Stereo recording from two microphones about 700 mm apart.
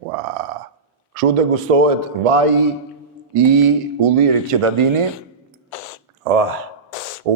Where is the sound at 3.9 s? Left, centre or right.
Right.